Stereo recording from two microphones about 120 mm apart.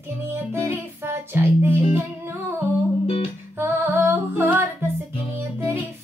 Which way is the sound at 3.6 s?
20° right (ahead or behind).